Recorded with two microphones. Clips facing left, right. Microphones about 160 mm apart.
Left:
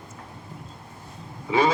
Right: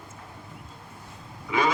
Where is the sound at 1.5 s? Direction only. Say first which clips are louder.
Left 4 dB; 30° left (ahead or behind).